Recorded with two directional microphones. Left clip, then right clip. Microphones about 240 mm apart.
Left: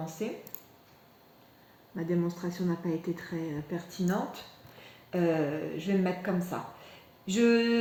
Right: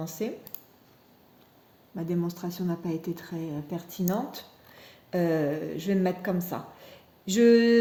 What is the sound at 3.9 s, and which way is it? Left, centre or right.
Speech, right.